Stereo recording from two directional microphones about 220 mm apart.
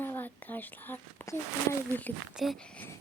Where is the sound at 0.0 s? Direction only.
10° left (ahead or behind).